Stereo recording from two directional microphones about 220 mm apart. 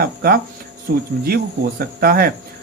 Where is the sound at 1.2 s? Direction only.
45° right (ahead or behind).